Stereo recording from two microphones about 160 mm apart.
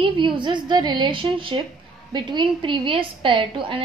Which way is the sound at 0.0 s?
30° right (ahead or behind).